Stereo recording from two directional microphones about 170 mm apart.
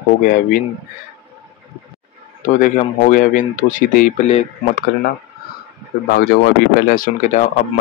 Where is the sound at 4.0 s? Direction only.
45° left (ahead or behind).